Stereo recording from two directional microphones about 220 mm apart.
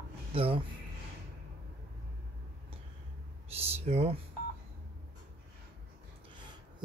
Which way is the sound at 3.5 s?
25° right (ahead or behind).